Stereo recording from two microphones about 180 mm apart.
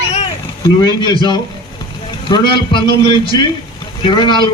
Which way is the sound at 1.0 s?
25° left (ahead or behind).